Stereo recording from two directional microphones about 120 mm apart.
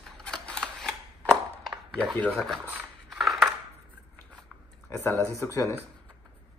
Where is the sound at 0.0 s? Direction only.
5° left (ahead or behind).